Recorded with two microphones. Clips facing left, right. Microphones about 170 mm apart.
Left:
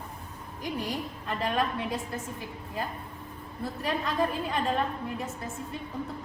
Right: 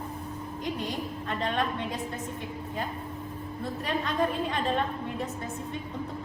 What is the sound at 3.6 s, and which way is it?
Speech, centre (ahead or behind).